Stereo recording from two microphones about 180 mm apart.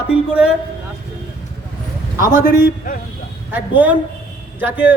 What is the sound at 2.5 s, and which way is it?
Speech, 50° left (ahead or behind).